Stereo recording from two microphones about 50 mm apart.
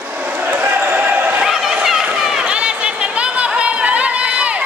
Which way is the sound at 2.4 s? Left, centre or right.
Right.